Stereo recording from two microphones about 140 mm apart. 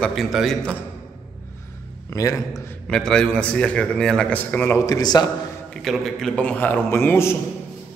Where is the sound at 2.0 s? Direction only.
25° left (ahead or behind).